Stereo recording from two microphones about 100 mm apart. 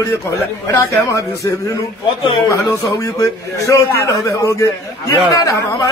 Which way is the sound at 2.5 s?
35° left (ahead or behind).